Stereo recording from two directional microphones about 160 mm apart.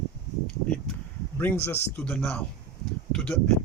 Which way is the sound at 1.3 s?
10° left (ahead or behind).